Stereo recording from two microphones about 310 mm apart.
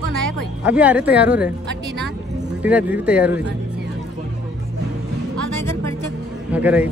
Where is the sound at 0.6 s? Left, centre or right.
Centre.